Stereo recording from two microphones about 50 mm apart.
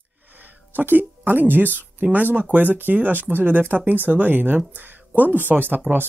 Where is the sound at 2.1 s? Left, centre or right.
Right.